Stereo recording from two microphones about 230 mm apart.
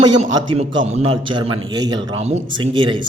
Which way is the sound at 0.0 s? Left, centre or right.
Centre.